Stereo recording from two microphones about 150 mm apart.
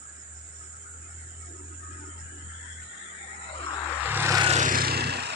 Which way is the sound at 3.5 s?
35° left (ahead or behind).